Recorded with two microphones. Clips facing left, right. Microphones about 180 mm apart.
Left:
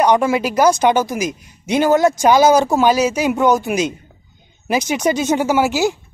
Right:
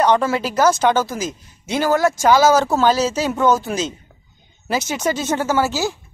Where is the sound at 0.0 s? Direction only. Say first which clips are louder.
Left 2 dB; 15° left (ahead or behind).